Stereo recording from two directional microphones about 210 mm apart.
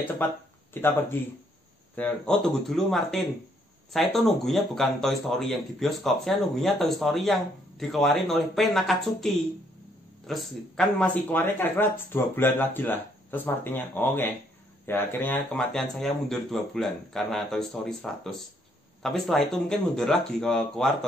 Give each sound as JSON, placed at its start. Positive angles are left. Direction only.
{"t": 0.8, "sound": "speech", "side_deg": 10}